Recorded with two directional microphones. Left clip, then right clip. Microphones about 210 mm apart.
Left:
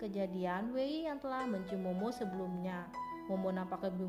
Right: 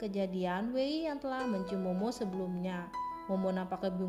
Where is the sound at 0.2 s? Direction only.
45° right (ahead or behind).